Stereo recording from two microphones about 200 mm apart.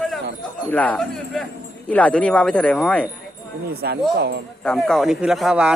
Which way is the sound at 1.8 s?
5° left (ahead or behind).